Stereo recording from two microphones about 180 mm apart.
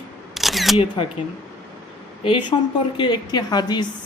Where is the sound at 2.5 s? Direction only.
25° left (ahead or behind).